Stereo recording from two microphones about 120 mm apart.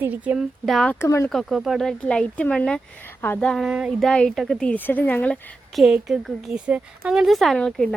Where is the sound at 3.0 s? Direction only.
15° left (ahead or behind).